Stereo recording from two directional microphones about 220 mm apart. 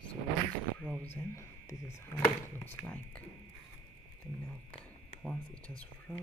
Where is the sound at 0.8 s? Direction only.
5° left (ahead or behind).